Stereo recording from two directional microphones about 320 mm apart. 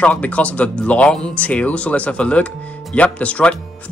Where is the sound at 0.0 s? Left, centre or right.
Centre.